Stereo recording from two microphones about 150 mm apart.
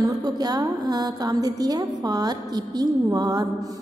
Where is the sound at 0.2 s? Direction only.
25° right (ahead or behind).